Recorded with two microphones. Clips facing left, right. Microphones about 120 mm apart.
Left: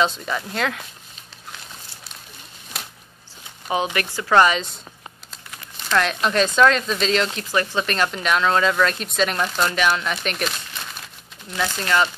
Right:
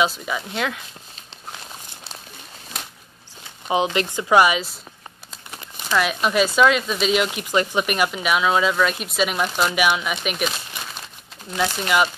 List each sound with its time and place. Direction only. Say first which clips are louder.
0.0 s speech: even; 5° right (ahead or behind)
2.8 s a sound: even; 5° left (ahead or behind)
3.6 s speech: right 2 dB; 20° right (ahead or behind)
5.9 s speech: even; 5° right (ahead or behind)
11.5 s speech: right 1 dB; 10° right (ahead or behind)